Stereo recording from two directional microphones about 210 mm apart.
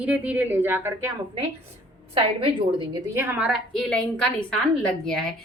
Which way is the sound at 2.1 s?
25° right (ahead or behind).